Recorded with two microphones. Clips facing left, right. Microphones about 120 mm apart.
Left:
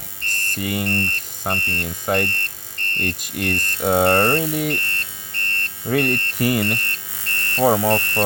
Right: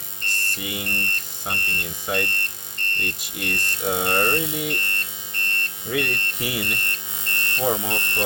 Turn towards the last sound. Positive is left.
turn(degrees=65)  # may be behind; listen again after turning